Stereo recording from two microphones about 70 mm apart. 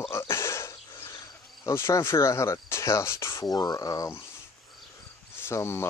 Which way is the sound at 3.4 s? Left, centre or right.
Left.